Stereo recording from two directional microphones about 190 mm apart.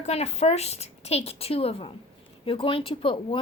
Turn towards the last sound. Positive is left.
turn(degrees=30)  # may be behind; listen again after turning